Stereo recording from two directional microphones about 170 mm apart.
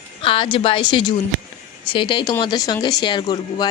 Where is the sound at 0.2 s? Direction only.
30° left (ahead or behind).